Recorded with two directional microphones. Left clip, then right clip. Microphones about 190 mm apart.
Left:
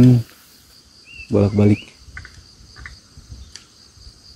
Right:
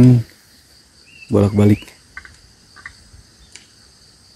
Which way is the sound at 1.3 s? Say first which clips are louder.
Right 2 dB; 5° right (ahead or behind).